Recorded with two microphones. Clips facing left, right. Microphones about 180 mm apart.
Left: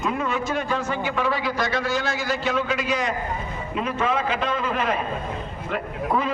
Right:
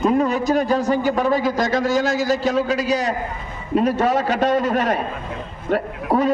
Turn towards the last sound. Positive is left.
turn(degrees=-40)  # may be behind; listen again after turning